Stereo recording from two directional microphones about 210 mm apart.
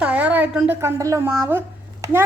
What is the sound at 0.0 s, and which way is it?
A woman's voice, 5° right (ahead or behind).